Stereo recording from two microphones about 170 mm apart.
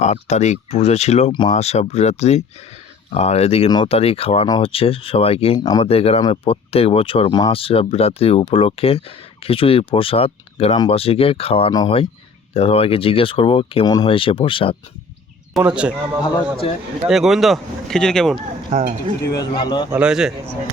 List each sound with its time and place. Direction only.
0.0 s speech: 40° left (ahead or behind)
1.3 s speech: 25° left (ahead or behind)
1.5 s speech: 40° left (ahead or behind)
5.5 s speech: 20° left (ahead or behind)
5.8 s speech: 35° left (ahead or behind)
11.7 s speech: 20° left (ahead or behind)
12.5 s speech: 35° left (ahead or behind)
15.5 s speech: 5° right (ahead or behind)
17.1 s speech: centre (ahead or behind)
18.7 s speech: 45° right (ahead or behind)
19.2 s speech: 20° left (ahead or behind)
19.9 s speech: 5° right (ahead or behind)